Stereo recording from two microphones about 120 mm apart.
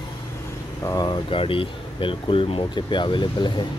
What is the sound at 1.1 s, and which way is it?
Speech, 45° left (ahead or behind).